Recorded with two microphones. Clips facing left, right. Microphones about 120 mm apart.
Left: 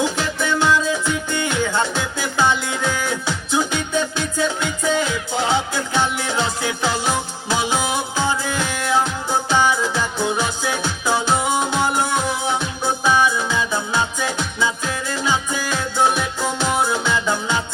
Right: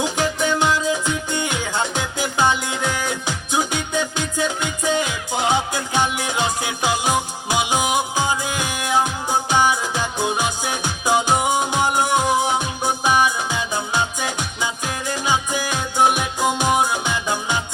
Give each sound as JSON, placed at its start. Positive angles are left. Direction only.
{"t": 0.0, "sound": "music", "side_deg": -15}